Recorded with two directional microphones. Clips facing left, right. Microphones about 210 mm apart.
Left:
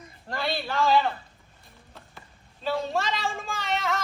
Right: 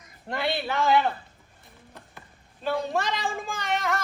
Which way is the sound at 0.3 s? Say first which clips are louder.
Right 2 dB; 20° right (ahead or behind).